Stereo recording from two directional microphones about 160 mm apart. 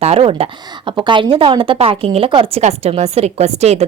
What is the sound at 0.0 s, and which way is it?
Speech, 40° right (ahead or behind).